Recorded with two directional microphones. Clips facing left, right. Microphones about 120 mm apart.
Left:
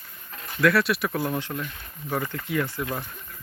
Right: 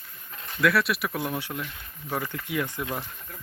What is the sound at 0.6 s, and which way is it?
Speech, centre (ahead or behind).